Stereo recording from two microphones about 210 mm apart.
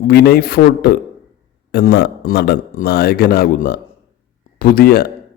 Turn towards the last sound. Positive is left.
turn(degrees=45)  # may be behind; listen again after turning